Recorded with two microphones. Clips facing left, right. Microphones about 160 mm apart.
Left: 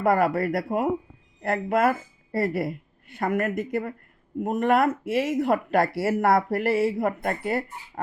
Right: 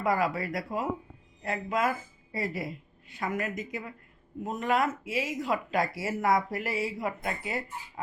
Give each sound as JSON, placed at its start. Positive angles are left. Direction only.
{"t": 0.0, "sound": "a woman's voice", "side_deg": 60}